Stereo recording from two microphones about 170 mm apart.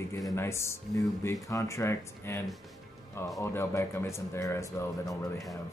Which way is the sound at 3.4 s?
15° left (ahead or behind).